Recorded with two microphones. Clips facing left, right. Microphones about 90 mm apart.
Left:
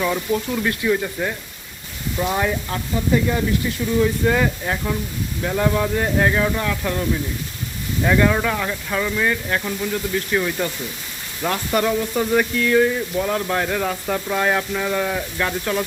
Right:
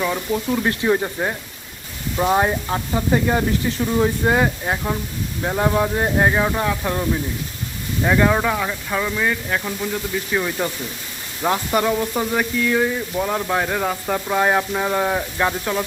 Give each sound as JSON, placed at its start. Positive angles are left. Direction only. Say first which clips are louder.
{"t": 0.0, "sound": "speech", "louder": "left 1 dB", "side_deg": -5}
{"t": 0.6, "sound": "speech", "louder": "right 1 dB", "side_deg": -30}
{"t": 4.4, "sound": "speech", "louder": "right 1 dB", "side_deg": -25}
{"t": 8.0, "sound": "frying", "louder": "right 1 dB", "side_deg": -15}
{"t": 11.7, "sound": "frying", "louder": "even", "side_deg": -10}